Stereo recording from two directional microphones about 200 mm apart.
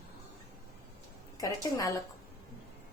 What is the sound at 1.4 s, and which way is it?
Speech, 15° left (ahead or behind).